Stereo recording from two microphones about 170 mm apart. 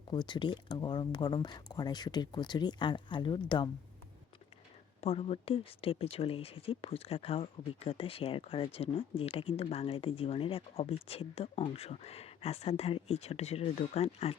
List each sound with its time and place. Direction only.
0.1 s speech: 25° left (ahead or behind)
4.9 s speech: 35° left (ahead or behind)